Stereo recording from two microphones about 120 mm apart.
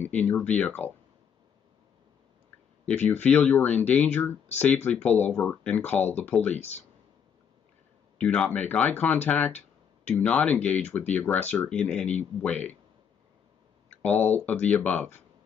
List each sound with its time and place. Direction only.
0.0 s speech: 15° left (ahead or behind)
3.0 s speech: 10° left (ahead or behind)
6.5 s speech: 65° left (ahead or behind)
8.2 s speech: 10° left (ahead or behind)
14.0 s speech: 15° left (ahead or behind)